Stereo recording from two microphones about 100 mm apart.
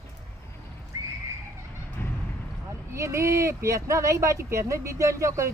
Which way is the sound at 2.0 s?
25° left (ahead or behind).